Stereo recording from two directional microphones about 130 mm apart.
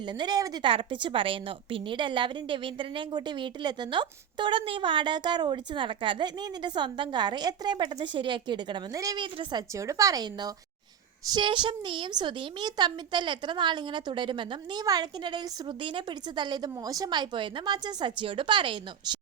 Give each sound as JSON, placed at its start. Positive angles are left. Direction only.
{"t": 0.1, "sound": "a woman's voice", "side_deg": -35}
{"t": 0.7, "sound": "a woman's voice", "side_deg": -40}
{"t": 9.2, "sound": "a woman's voice", "side_deg": -35}